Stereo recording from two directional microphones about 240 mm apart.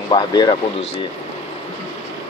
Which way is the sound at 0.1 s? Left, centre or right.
Centre.